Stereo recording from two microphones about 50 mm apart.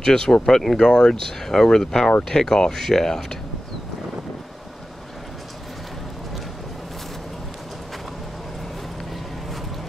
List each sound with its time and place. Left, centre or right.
0.0 s speech: centre